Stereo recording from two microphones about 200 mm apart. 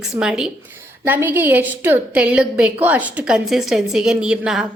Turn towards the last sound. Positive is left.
turn(degrees=-5)  # may be behind; listen again after turning